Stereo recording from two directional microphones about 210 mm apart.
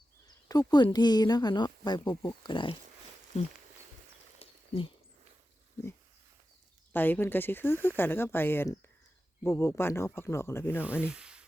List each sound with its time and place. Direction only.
0.4 s speech: 15° left (ahead or behind)
4.4 s a sound: 25° left (ahead or behind)
6.9 s speech: 10° left (ahead or behind)
10.8 s sanding: 5° right (ahead or behind)